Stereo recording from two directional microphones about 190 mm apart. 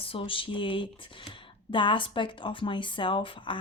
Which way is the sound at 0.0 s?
30° left (ahead or behind).